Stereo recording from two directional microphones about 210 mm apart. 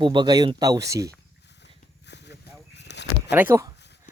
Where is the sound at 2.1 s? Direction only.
55° left (ahead or behind).